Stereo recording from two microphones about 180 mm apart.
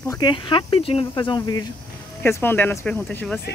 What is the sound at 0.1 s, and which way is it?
Speech, 25° left (ahead or behind).